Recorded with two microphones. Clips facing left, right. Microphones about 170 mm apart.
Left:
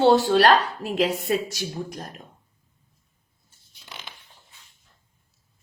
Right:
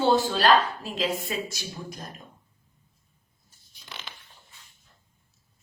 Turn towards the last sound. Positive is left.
turn(degrees=10)  # may be behind; listen again after turning